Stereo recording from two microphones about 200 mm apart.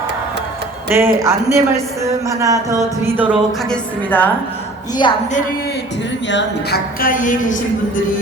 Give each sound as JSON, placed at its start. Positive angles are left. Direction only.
{"t": 0.9, "sound": "speech", "side_deg": -15}
{"t": 3.7, "sound": "a woman's voice", "side_deg": 10}
{"t": 5.0, "sound": "speech", "side_deg": 25}
{"t": 6.2, "sound": "speech", "side_deg": 60}